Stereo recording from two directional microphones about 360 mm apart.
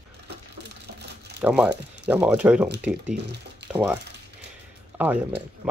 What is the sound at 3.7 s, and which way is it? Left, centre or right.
Speech, centre.